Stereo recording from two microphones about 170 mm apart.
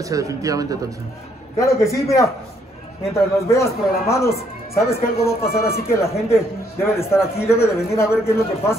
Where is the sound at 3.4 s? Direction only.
15° left (ahead or behind).